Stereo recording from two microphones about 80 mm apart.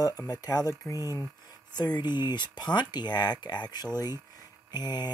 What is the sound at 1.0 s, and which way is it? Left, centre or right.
Speech, right.